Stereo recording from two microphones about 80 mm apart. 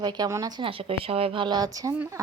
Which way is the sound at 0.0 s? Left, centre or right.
Right.